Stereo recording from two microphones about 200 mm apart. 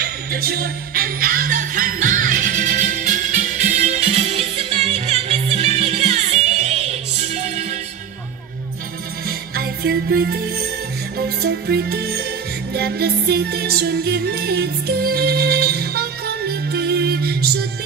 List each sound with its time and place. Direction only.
0.0 s music: 50° right (ahead or behind); by 7.6 s 30° right (ahead or behind)
9.6 s music: 50° right (ahead or behind)